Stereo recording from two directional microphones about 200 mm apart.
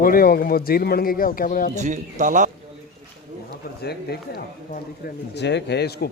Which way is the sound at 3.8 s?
50° left (ahead or behind).